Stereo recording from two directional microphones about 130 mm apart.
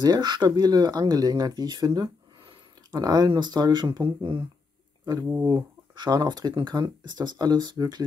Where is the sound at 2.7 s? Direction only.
30° right (ahead or behind).